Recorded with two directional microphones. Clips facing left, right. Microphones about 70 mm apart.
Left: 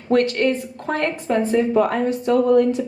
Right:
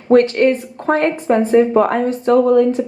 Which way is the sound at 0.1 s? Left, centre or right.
Right.